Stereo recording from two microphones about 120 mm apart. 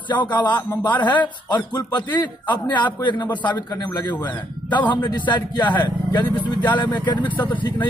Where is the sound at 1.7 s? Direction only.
35° left (ahead or behind).